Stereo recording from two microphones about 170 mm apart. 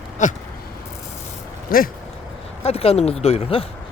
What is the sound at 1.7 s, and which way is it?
Speech, 60° left (ahead or behind).